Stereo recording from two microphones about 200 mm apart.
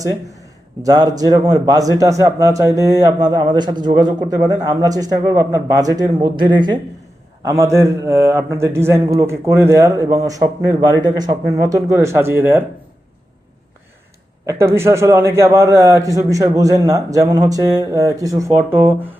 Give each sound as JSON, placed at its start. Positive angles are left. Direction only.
{"t": 0.0, "sound": "a man's voice", "side_deg": -15}
{"t": 14.4, "sound": "a man's voice", "side_deg": -15}